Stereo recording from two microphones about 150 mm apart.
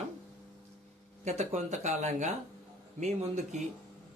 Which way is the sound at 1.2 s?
50° right (ahead or behind).